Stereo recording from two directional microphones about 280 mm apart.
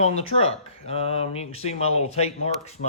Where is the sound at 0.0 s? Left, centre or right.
Left.